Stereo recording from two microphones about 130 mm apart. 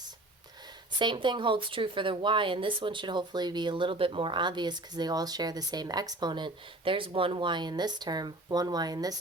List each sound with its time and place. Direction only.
0.9 s speech: 35° right (ahead or behind)